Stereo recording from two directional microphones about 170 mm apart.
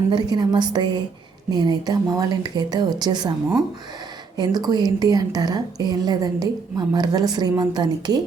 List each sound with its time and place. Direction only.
0.1 s a woman's voice: 25° right (ahead or behind)
4.4 s a woman's voice: 25° right (ahead or behind)